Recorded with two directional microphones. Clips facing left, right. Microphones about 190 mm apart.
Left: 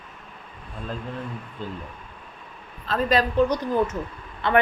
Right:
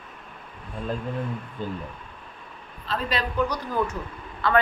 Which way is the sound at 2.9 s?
45° left (ahead or behind).